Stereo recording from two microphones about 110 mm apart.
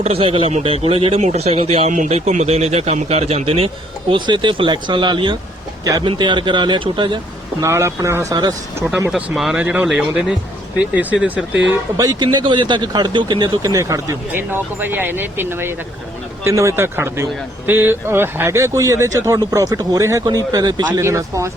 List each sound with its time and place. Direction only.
0.0 s speech: 60° right (ahead or behind)
4.1 s speech: 45° right (ahead or behind)
7.6 s speech: 25° right (ahead or behind)
9.1 s speech: centre (ahead or behind)
9.6 s speech: 15° right (ahead or behind)
11.7 s speech: 30° right (ahead or behind)
12.2 s speech: 45° right (ahead or behind)
13.6 s speech: 30° right (ahead or behind)
14.3 s speech: 20° right (ahead or behind)